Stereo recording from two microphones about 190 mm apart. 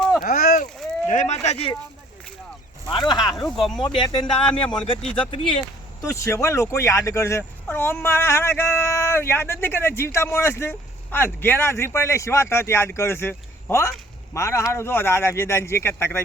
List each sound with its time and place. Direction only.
0.2 s a sound: 50° left (ahead or behind)
1.0 s speech: 40° left (ahead or behind)
3.1 s a man's voice: 20° left (ahead or behind)
3.3 s speech: centre (ahead or behind)
3.8 s a man's voice: 25° left (ahead or behind)
6.0 s speech: 15° left (ahead or behind)